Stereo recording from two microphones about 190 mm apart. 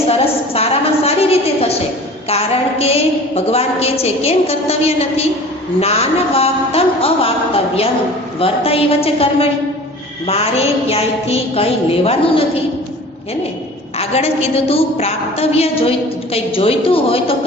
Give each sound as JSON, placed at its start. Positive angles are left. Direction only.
{"t": 0.1, "sound": "a woman's voice", "side_deg": 30}
{"t": 14.0, "sound": "a woman's voice", "side_deg": 35}